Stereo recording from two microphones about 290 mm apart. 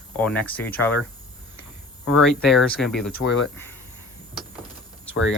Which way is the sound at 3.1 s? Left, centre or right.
Left.